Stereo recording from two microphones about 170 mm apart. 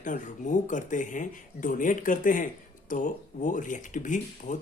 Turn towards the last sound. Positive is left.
turn(degrees=45)  # may be behind; listen again after turning